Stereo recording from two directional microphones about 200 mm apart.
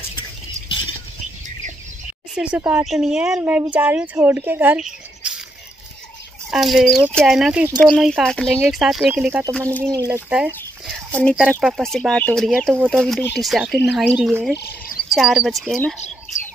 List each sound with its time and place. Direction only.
2.3 s speech: 5° right (ahead or behind)
6.5 s speech: centre (ahead or behind); by 10.2 s 15° right (ahead or behind)
10.3 s a sound: 5° right (ahead or behind)
11.2 s speech: 5° right (ahead or behind)